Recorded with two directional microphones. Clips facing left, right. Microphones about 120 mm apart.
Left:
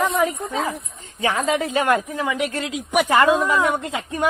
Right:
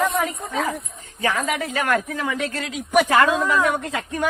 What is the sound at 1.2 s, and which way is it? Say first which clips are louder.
Speech: left 2 dB; 25° left (ahead or behind).